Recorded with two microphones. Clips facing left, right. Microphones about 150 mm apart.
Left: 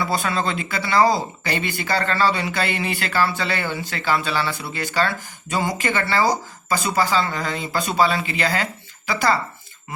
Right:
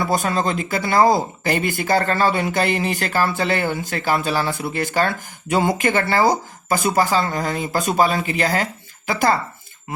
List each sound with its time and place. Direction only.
0.0 s speech: 45° right (ahead or behind)